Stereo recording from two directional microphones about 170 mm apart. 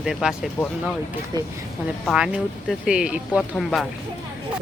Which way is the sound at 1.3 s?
25° right (ahead or behind).